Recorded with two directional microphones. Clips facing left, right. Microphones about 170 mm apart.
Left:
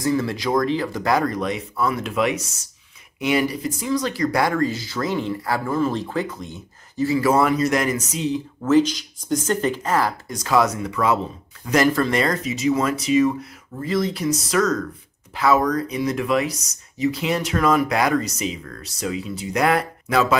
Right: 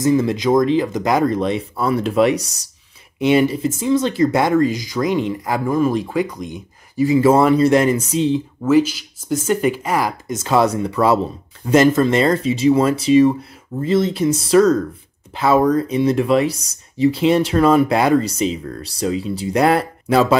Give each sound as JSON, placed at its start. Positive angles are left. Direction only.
{"t": 0.0, "sound": "speech", "side_deg": -20}
{"t": 8.6, "sound": "speech", "side_deg": -10}
{"t": 11.6, "sound": "speech", "side_deg": -25}